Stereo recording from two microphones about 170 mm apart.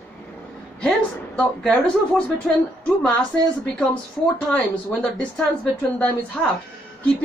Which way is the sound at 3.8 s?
5° left (ahead or behind).